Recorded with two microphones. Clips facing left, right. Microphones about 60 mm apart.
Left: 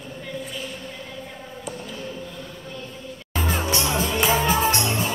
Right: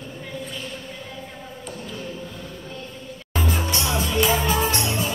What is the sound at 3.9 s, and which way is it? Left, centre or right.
Music, left.